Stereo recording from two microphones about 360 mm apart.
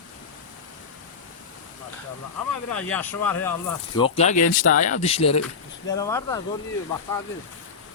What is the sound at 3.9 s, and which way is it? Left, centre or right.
Speech, centre.